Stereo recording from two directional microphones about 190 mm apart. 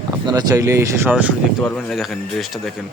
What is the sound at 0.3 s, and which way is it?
Speech, 20° right (ahead or behind).